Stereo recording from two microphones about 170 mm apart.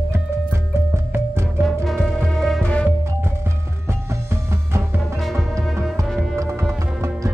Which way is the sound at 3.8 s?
15° right (ahead or behind).